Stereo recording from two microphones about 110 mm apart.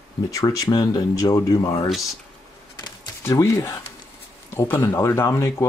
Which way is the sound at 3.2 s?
25° left (ahead or behind).